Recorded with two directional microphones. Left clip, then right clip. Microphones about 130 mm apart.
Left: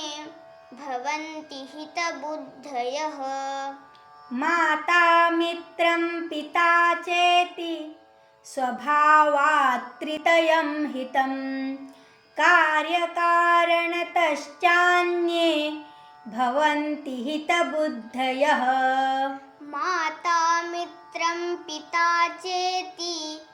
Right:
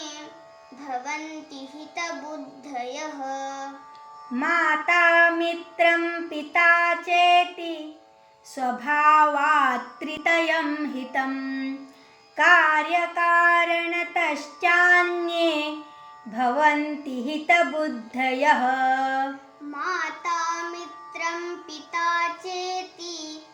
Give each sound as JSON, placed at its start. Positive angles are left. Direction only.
{"t": 0.8, "sound": "music", "side_deg": 90}
{"t": 2.6, "sound": "child singing", "side_deg": 90}
{"t": 4.4, "sound": "child singing", "side_deg": 15}
{"t": 19.7, "sound": "music", "side_deg": 90}
{"t": 21.9, "sound": "child singing", "side_deg": 90}